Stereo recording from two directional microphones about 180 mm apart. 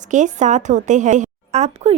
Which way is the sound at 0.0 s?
45° right (ahead or behind).